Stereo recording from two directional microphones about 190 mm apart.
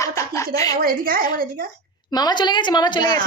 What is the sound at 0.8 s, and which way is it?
Speech, 50° right (ahead or behind).